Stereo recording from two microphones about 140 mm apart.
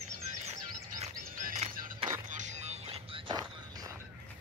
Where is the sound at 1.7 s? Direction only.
80° right.